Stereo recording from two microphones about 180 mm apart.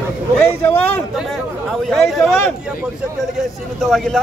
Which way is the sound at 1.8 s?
Centre (ahead or behind).